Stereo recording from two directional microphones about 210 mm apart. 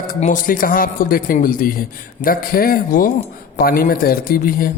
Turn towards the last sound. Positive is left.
turn(degrees=45)  # may be behind; listen again after turning